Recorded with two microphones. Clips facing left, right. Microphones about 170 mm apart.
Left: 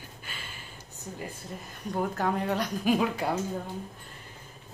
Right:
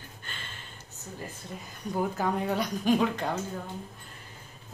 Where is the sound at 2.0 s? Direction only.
Centre (ahead or behind).